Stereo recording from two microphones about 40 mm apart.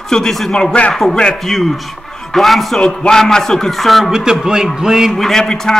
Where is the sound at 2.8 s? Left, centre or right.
Centre.